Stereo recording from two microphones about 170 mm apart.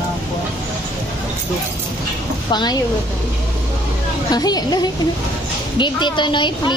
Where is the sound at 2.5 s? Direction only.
25° left (ahead or behind).